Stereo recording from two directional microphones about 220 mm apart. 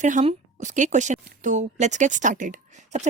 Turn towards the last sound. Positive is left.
turn(degrees=-35)  # may be behind; listen again after turning